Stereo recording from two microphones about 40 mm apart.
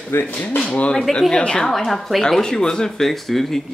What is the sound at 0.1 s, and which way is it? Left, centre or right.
Speech, left.